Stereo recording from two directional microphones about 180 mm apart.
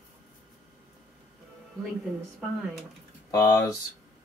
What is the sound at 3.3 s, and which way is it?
Speech, 15° left (ahead or behind).